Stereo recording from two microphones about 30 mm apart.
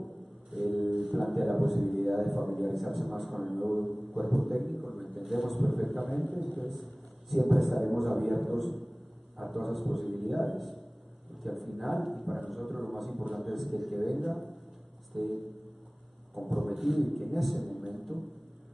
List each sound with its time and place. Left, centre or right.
0.5 s music: centre
0.9 s a man's voice: centre
3.9 s a man's voice: right
4.3 s a man's voice: centre
16.5 s a man's voice: centre